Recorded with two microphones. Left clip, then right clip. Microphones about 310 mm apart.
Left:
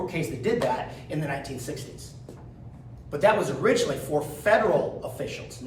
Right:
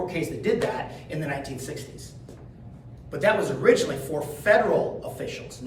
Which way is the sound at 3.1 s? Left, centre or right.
Centre.